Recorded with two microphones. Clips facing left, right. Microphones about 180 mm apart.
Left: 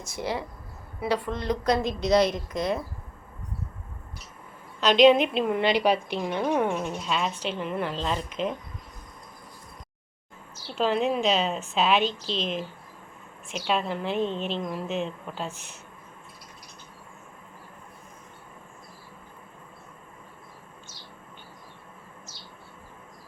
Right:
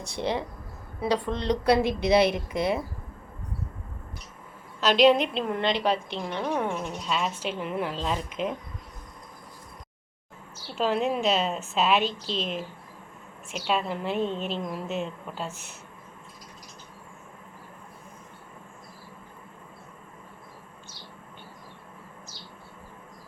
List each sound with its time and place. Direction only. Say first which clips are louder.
0.2 s a woman's voice: right 2 dB; 20° right (ahead or behind)
4.8 s a woman's voice: left 2 dB; centre (ahead or behind)
10.8 s a woman's voice: left 1 dB; centre (ahead or behind)